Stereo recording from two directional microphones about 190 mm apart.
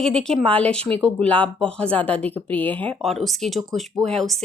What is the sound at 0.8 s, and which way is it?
Speech, 30° right (ahead or behind).